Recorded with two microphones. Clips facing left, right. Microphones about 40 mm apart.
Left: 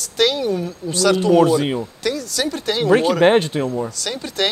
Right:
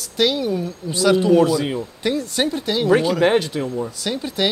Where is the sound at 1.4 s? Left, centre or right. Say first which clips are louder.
Left 2 dB; centre.